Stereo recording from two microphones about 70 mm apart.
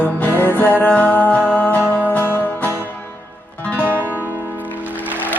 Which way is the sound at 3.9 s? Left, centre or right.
Right.